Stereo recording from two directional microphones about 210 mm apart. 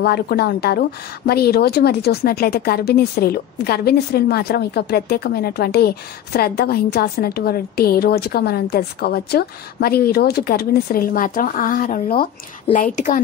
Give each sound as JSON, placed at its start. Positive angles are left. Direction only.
{"t": 0.0, "sound": "a woman's voice", "side_deg": 50}